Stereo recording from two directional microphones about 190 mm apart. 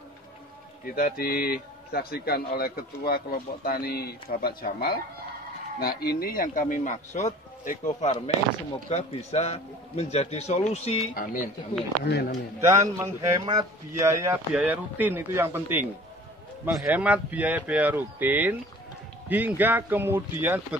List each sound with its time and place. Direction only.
0.8 s a man's voice: 50° left (ahead or behind)
12.1 s a man's voice: 55° left (ahead or behind)
12.5 s a man's voice: 15° right (ahead or behind)